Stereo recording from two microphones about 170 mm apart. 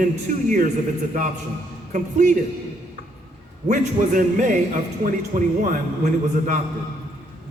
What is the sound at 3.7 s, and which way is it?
A man's voice, 50° right (ahead or behind).